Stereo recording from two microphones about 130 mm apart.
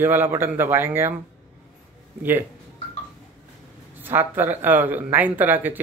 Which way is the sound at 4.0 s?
15° right (ahead or behind).